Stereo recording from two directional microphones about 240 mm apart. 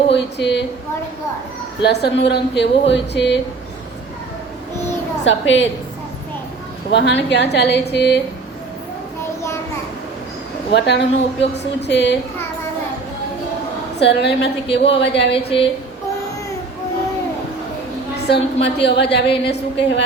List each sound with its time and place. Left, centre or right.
0.1 s a woman's voice: left
1.8 s a woman's voice: left
5.2 s a woman's voice: left
6.9 s a woman's voice: left
10.8 s a woman's voice: left
14.0 s a woman's voice: left
15.3 s a woman's voice: left
18.3 s a woman's voice: left